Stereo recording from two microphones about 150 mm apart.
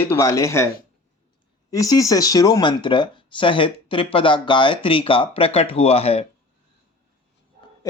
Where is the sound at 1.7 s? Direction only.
25° left (ahead or behind); by 6.3 s 40° left (ahead or behind).